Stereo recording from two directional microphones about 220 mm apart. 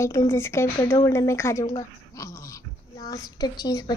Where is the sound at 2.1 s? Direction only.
15° left (ahead or behind).